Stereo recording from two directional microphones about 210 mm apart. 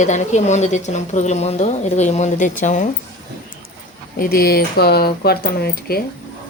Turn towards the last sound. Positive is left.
turn(degrees=45)  # may be behind; listen again after turning